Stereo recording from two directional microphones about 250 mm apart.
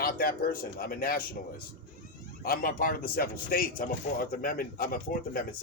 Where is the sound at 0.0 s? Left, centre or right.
Left.